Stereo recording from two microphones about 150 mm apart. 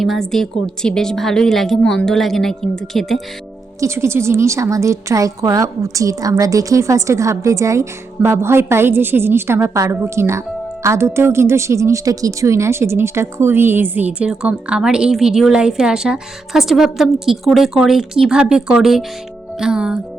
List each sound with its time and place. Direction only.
0.0 s a woman's voice: centre (ahead or behind)
3.8 s a woman's voice: 20° right (ahead or behind)